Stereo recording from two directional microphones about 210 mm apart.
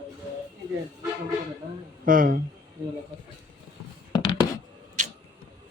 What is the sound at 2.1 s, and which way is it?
Speech, 40° right (ahead or behind).